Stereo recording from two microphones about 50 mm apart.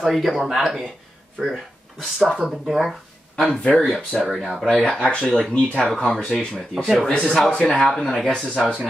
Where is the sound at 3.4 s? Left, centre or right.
Left.